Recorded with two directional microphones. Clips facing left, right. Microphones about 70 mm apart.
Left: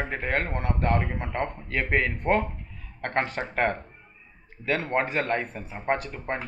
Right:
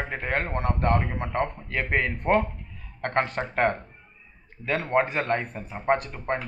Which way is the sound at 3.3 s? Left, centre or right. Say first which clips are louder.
Right 2 dB; centre.